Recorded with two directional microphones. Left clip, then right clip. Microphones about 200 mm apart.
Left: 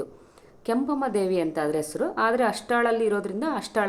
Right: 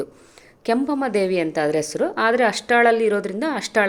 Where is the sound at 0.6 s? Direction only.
20° right (ahead or behind).